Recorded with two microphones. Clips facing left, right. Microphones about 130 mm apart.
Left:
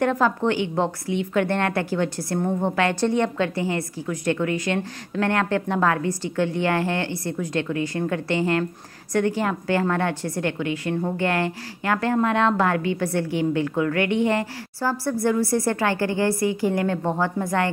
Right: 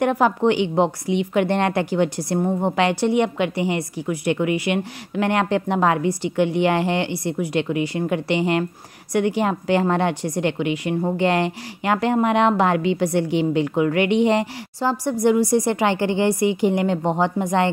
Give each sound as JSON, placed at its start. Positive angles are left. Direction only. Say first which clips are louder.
{"t": 0.0, "sound": "a woman's voice", "louder": "right 3 dB", "side_deg": -15}